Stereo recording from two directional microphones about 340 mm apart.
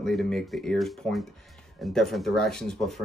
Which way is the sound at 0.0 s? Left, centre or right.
Centre.